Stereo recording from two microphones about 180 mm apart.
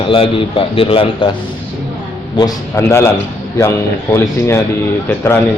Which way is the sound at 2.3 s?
15° left (ahead or behind).